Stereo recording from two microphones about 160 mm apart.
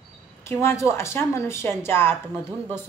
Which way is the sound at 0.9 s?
15° left (ahead or behind).